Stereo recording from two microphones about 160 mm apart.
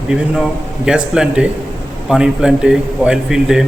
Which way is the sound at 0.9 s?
5° right (ahead or behind).